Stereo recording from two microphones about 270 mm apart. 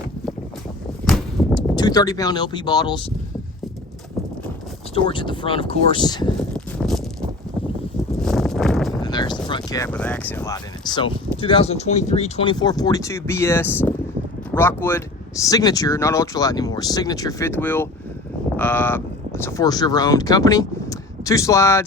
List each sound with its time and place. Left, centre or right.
1.0 s a sound: centre
1.7 s speech: centre
4.9 s speech: centre
6.7 s a sound: centre
8.2 s horse: centre
9.0 s speech: centre